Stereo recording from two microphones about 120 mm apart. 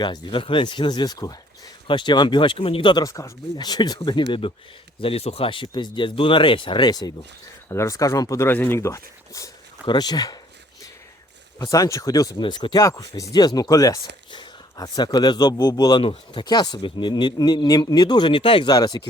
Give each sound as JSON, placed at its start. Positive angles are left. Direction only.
{"t": 0.0, "sound": "speech", "side_deg": 40}
{"t": 3.0, "sound": "speech", "side_deg": 30}
{"t": 7.7, "sound": "speech", "side_deg": 25}
{"t": 9.8, "sound": "speech", "side_deg": 35}
{"t": 11.6, "sound": "speech", "side_deg": 25}
{"t": 12.8, "sound": "speech", "side_deg": 25}
{"t": 18.7, "sound": "speech", "side_deg": 35}